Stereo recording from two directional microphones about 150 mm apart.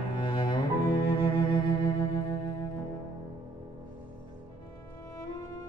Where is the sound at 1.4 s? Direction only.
30° left (ahead or behind).